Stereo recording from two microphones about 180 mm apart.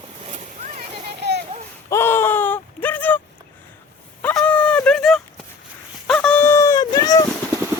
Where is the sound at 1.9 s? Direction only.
15° left (ahead or behind).